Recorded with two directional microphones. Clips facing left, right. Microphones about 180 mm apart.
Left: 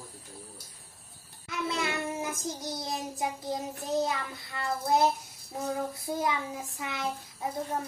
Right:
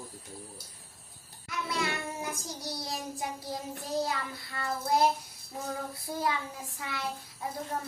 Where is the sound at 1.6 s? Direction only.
20° left (ahead or behind).